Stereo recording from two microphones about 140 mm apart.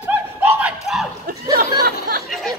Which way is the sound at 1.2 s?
90° right.